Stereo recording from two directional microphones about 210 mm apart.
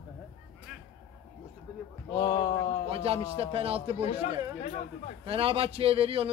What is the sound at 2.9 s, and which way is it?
A man's voice, 25° right (ahead or behind).